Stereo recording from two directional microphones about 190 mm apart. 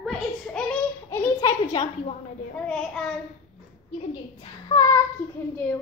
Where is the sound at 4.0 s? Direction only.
30° left (ahead or behind).